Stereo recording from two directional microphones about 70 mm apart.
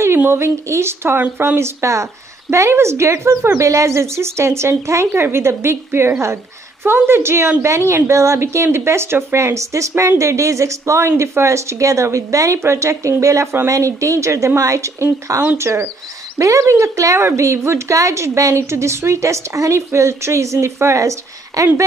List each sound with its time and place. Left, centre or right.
0.3 s speech: right
1.6 s a woman's voice: right